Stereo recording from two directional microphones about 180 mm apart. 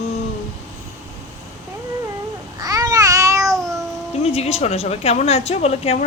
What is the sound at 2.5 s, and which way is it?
Babbling, 20° right (ahead or behind).